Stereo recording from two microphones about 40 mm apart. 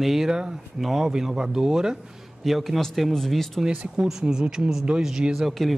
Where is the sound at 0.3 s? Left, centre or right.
Centre.